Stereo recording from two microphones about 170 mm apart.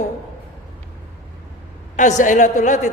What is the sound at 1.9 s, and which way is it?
Speech, 45° left (ahead or behind).